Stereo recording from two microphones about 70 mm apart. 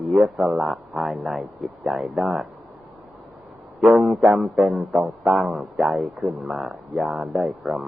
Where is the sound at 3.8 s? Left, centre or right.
Centre.